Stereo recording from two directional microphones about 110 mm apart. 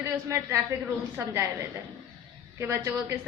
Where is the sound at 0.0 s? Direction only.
25° right (ahead or behind).